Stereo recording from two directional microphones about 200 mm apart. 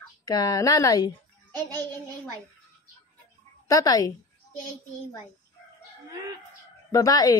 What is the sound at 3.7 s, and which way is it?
Speech, 15° left (ahead or behind).